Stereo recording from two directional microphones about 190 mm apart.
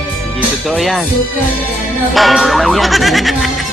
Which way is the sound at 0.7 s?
Centre (ahead or behind).